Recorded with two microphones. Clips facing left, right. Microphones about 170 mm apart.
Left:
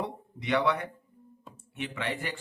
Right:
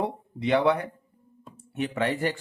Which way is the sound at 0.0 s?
30° right (ahead or behind).